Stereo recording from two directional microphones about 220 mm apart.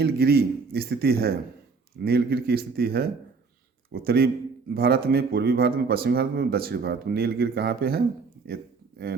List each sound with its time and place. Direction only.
0.0 s speech: 45° right (ahead or behind)